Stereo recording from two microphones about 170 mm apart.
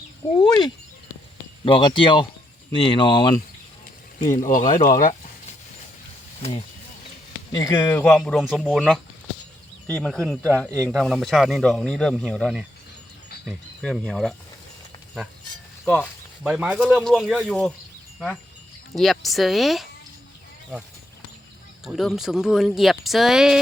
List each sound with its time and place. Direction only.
1.6 s speech: 30° left (ahead or behind)
4.3 s speech: 50° left (ahead or behind)
7.5 s speech: 20° left (ahead or behind); by 12.6 s centre (ahead or behind)
13.8 s speech: centre (ahead or behind)
15.8 s speech: centre (ahead or behind)
18.9 s speech: centre (ahead or behind)
21.8 s speech: centre (ahead or behind)